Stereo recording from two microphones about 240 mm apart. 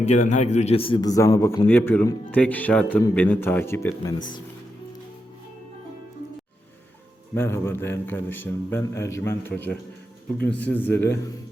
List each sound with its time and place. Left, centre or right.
0.0 s a man's voice: left
7.3 s a man's voice: centre